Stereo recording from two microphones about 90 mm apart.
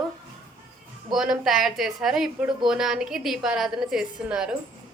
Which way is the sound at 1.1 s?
5° right (ahead or behind).